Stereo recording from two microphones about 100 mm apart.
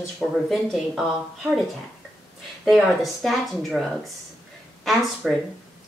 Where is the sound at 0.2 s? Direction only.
Centre (ahead or behind).